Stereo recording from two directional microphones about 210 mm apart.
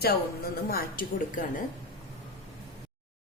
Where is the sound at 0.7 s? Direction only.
45° left (ahead or behind).